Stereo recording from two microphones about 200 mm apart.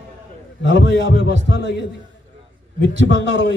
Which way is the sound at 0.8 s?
60° left (ahead or behind).